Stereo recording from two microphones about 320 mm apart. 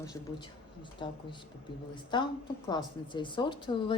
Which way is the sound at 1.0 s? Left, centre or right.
Centre.